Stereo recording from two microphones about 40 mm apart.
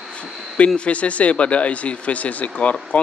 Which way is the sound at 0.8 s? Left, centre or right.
Left.